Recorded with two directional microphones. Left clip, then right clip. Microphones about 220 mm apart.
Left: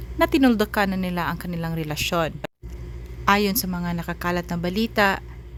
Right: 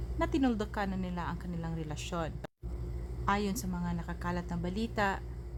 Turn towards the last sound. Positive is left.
turn(degrees=25)  # may be behind; listen again after turning